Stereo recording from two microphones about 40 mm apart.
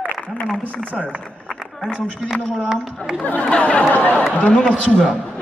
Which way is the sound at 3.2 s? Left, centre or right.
Left.